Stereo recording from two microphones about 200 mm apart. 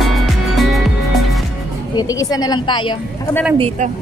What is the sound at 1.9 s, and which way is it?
A woman's voice, 15° left (ahead or behind).